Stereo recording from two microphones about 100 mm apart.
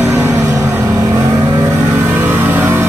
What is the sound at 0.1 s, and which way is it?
Vehicle, 25° right (ahead or behind).